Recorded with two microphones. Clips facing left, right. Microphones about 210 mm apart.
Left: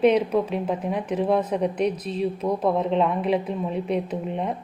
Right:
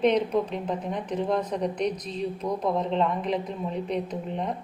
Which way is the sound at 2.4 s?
60° left (ahead or behind).